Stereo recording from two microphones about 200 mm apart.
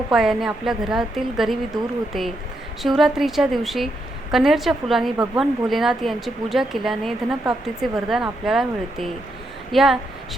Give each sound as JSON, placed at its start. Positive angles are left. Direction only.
{"t": 0.1, "sound": "speech", "side_deg": 0}
{"t": 2.8, "sound": "speech", "side_deg": 0}
{"t": 5.1, "sound": "speech", "side_deg": -20}
{"t": 5.4, "sound": "speech", "side_deg": 0}